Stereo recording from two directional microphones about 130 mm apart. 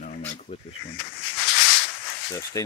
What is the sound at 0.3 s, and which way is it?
Snake, 60° left (ahead or behind).